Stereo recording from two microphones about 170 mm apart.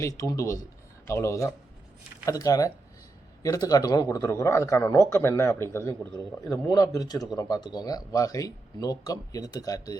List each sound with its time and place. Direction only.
0.0 s a man's voice: 20° left (ahead or behind)